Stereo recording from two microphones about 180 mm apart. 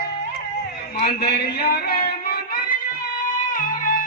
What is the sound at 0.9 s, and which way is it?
A man's voice, 60° left (ahead or behind).